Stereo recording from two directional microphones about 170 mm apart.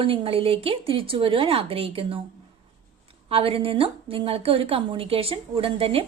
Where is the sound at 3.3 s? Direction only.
35° right (ahead or behind).